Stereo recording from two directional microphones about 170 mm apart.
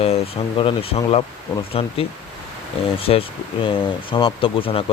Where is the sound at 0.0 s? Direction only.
35° left (ahead or behind).